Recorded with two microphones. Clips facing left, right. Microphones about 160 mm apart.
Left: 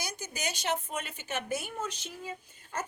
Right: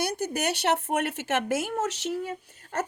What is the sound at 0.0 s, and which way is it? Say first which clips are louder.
Speech: right 10 dB; 65° right (ahead or behind).